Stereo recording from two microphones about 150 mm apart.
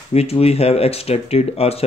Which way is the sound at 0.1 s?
45° left (ahead or behind).